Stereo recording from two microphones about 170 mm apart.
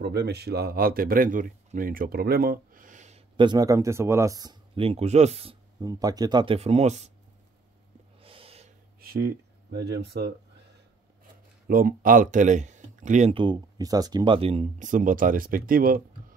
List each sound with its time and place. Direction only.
0.0 s speech: 75° right (ahead or behind); by 4.6 s 20° right (ahead or behind)
4.7 s speech: 35° right (ahead or behind)
5.8 s speech: 20° right (ahead or behind); by 7.1 s 40° right (ahead or behind)
8.2 s snort: 35° right (ahead or behind)
9.0 s speech: 65° right (ahead or behind); by 10.3 s 85° right
11.6 s speech: 60° right (ahead or behind)
13.3 s speech: 30° right (ahead or behind); by 16.3 s 60° right (ahead or behind)